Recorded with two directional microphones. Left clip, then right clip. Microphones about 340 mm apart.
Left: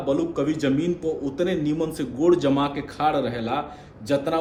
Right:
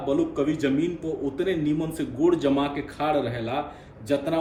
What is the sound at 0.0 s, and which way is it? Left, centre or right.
A man's voice, centre.